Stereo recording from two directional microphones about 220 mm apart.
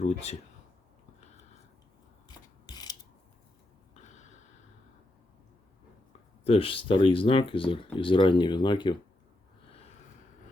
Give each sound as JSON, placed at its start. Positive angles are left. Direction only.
{"t": 0.0, "sound": "speech", "side_deg": 30}
{"t": 2.2, "sound": "rub", "side_deg": 20}
{"t": 3.9, "sound": "a sound", "side_deg": 30}
{"t": 6.4, "sound": "speech", "side_deg": 25}